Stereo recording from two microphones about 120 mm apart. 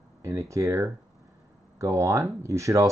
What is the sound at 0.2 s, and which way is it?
Speech, 25° right (ahead or behind).